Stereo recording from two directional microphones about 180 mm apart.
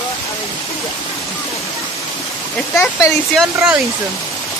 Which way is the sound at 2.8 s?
15° left (ahead or behind).